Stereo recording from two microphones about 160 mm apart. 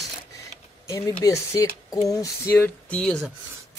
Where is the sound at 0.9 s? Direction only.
20° left (ahead or behind).